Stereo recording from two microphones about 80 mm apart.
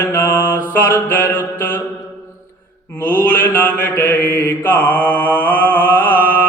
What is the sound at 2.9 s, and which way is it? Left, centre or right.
Mantra, left.